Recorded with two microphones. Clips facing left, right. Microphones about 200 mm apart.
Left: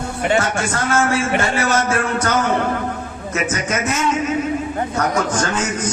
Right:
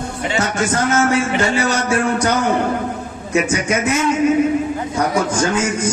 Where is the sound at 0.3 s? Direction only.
20° right (ahead or behind).